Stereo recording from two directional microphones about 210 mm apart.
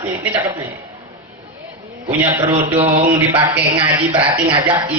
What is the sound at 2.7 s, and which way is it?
Speech, 25° right (ahead or behind).